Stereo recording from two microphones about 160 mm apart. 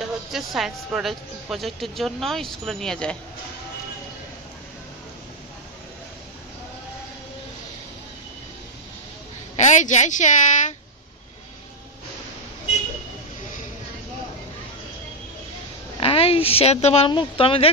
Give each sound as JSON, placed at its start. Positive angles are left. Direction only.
{"t": 0.0, "sound": "speech", "side_deg": 0}
{"t": 9.6, "sound": "a woman's voice", "side_deg": 50}
{"t": 16.0, "sound": "speech", "side_deg": 40}